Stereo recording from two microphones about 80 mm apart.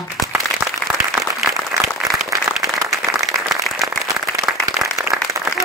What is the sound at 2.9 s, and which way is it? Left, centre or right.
Applause, centre.